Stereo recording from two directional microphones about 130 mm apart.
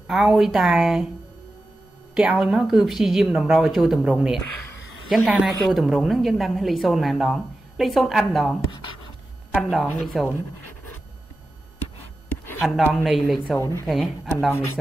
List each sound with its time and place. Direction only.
0.0 s a woman's voice: 5° right (ahead or behind)
2.1 s a woman's voice: 5° right (ahead or behind)
8.7 s speech: 40° left (ahead or behind)
9.6 s a woman's voice: centre (ahead or behind)
12.6 s a woman's voice: centre (ahead or behind)
13.6 s speech: 25° left (ahead or behind)
13.8 s a woman's voice: centre (ahead or behind)